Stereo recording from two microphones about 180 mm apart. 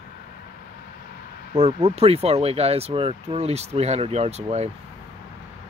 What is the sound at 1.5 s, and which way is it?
Speech, 35° right (ahead or behind).